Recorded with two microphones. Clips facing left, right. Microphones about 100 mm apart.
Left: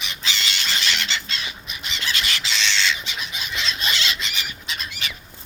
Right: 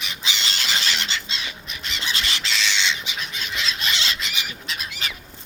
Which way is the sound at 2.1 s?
30° right (ahead or behind).